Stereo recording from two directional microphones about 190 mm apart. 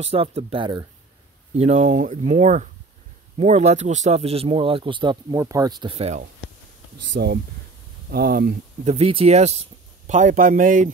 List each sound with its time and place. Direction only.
0.0 s speech: 30° right (ahead or behind)
1.5 s speech: 35° right (ahead or behind)
7.2 s speech: 60° right (ahead or behind)
8.8 s speech: 30° right (ahead or behind)